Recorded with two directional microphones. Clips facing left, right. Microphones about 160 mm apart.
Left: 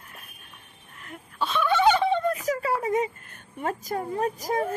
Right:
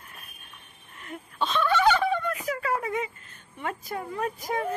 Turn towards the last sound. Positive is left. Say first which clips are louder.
# left 3 dB
turn(degrees=40)  # may be behind; listen again after turning